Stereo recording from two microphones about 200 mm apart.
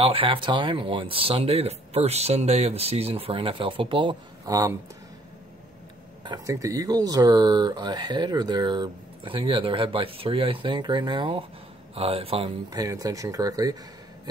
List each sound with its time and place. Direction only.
0.0 s speech: 25° right (ahead or behind)
6.2 s speech: 20° right (ahead or behind)